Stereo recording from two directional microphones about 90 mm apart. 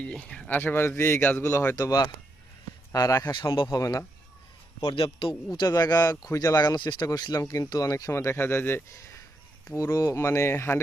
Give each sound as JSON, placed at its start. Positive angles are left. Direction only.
{"t": 0.0, "sound": "speech", "side_deg": 10}
{"t": 1.7, "sound": "speech", "side_deg": 45}
{"t": 3.8, "sound": "speech", "side_deg": 40}
{"t": 4.9, "sound": "a man's voice", "side_deg": 70}
{"t": 5.5, "sound": "speech", "side_deg": 45}
{"t": 6.6, "sound": "speech", "side_deg": 50}
{"t": 7.4, "sound": "speech", "side_deg": 35}